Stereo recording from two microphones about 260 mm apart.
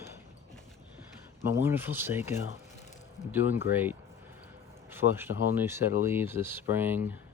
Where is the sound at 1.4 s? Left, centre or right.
Centre.